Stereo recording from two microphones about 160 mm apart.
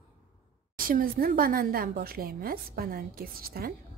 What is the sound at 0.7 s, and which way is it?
A woman's voice, 60° right (ahead or behind).